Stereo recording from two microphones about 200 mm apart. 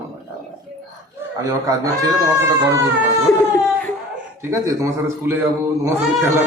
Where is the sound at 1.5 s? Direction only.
15° right (ahead or behind).